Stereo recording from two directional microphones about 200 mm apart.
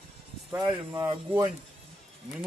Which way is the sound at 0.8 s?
25° right (ahead or behind).